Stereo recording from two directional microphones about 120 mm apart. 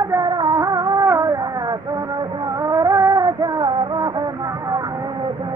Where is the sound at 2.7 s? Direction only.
25° right (ahead or behind).